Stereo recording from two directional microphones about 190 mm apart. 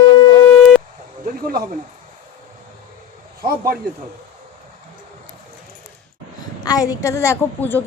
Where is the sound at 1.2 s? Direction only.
50° right (ahead or behind).